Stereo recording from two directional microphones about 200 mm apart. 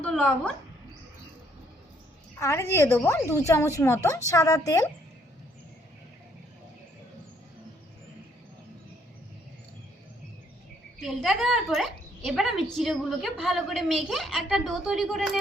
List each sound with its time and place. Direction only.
0.0 s speech: 5° left (ahead or behind)
2.4 s a woman's voice: 15° left (ahead or behind)
11.0 s a woman's voice: centre (ahead or behind)